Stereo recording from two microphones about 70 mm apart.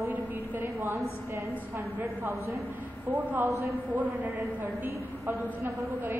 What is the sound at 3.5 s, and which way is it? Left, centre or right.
Speech, right.